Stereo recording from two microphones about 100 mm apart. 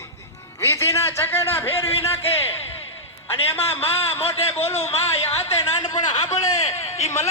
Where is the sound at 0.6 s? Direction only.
30° left (ahead or behind).